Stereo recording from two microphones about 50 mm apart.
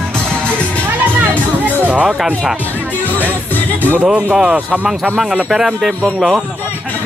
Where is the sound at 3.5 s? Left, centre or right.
Left.